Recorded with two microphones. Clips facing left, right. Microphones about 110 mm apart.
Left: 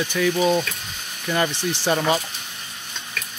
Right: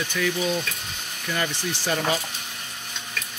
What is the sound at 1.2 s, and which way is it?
Speech, 30° left (ahead or behind).